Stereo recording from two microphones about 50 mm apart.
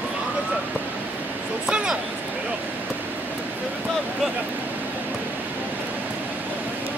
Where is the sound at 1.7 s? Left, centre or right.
Centre.